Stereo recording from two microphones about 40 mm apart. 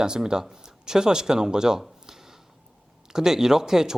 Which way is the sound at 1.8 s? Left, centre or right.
Centre.